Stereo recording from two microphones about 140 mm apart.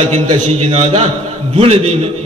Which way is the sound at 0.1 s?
50° right (ahead or behind).